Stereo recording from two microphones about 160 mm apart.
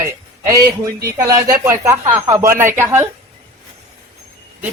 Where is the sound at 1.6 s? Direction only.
15° right (ahead or behind).